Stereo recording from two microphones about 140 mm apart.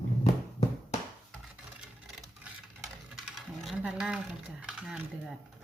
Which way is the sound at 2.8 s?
Centre (ahead or behind).